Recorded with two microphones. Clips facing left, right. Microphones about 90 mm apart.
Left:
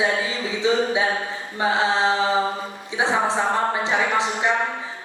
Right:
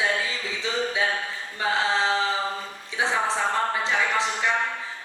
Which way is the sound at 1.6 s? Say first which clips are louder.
Left 4 dB; 20° left (ahead or behind).